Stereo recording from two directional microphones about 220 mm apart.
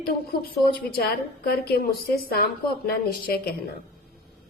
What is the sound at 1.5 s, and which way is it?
A woman's voice, 45° left (ahead or behind).